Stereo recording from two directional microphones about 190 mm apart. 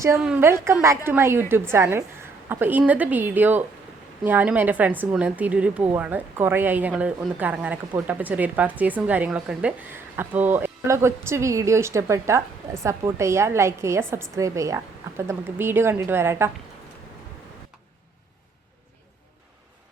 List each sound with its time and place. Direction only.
0.2 s a woman's voice: 5° right (ahead or behind)